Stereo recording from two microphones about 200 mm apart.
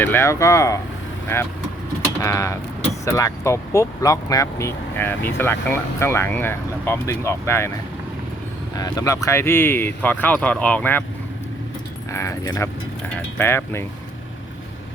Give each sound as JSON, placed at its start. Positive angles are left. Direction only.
{"t": 0.0, "sound": "speech", "side_deg": 10}
{"t": 8.7, "sound": "speech", "side_deg": 20}
{"t": 12.1, "sound": "speech", "side_deg": 15}